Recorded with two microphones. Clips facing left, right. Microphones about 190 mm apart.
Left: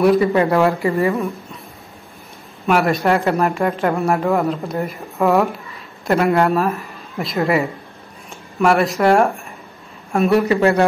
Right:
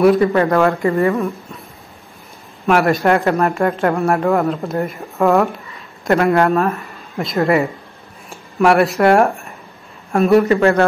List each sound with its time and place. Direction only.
0.0 s speech: centre (ahead or behind)
0.3 s speech: 10° left (ahead or behind)
2.6 s speech: centre (ahead or behind)
10.6 s speech: 15° left (ahead or behind)